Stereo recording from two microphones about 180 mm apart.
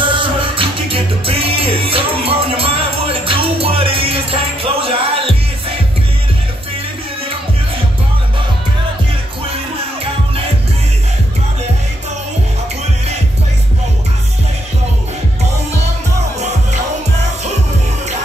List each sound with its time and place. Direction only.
0.0 s music: 30° right (ahead or behind)